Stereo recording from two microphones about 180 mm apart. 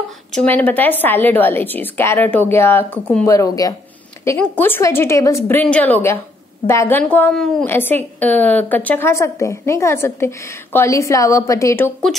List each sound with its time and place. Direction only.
0.3 s a woman's voice: 5° left (ahead or behind)
3.3 s a woman's voice: 20° left (ahead or behind)